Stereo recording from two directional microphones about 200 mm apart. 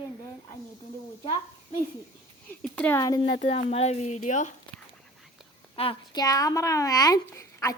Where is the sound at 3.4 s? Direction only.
30° left (ahead or behind).